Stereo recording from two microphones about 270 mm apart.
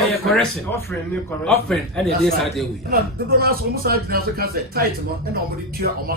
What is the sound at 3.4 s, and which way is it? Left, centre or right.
Speech, right.